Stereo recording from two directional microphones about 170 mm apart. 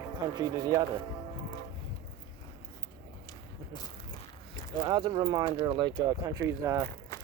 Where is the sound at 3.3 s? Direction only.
25° left (ahead or behind).